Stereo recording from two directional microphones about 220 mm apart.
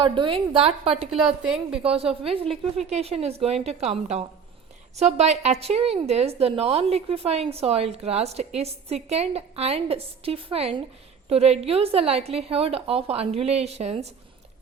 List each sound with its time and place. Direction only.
0.0 s a woman's voice: 20° right (ahead or behind)
1.1 s a woman's voice: 5° right (ahead or behind)
1.8 s a woman's voice: 25° right (ahead or behind)